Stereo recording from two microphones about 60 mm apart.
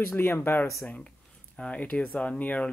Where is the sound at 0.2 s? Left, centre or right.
Left.